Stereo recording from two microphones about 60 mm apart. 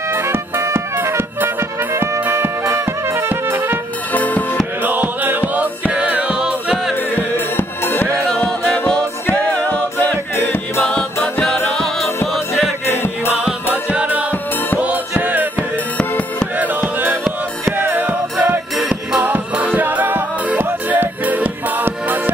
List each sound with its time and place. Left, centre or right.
0.1 s music: right
4.1 s music: left
4.8 s music: right; by 6.8 s centre
7.2 s music: left
9.3 s music: centre
10.3 s music: left
12.3 s music: centre
12.8 s music: left
13.9 s music: right
16.0 s music: centre
16.5 s music: right